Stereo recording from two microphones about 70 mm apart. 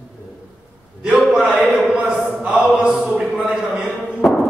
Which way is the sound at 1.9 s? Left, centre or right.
Centre.